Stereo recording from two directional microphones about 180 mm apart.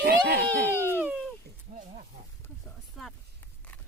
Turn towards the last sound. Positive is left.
turn(degrees=0)  # may be behind; listen again after turning